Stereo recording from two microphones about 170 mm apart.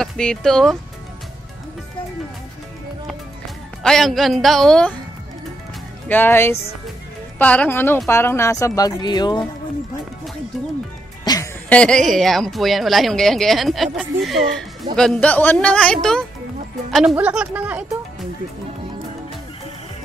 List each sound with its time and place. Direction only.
0.0 s speech: 5° left (ahead or behind)
3.8 s speech: centre (ahead or behind)
6.0 s a woman's voice: 10° left (ahead or behind)
11.3 s music: 20° left (ahead or behind)
11.7 s a woman's voice: 5° left (ahead or behind)